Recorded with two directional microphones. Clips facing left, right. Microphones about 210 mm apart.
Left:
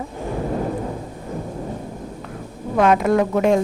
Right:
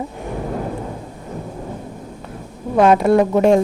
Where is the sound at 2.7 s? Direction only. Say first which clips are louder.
Right 3 dB; 30° right (ahead or behind).